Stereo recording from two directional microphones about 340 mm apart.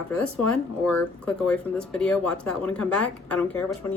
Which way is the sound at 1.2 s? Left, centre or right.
Centre.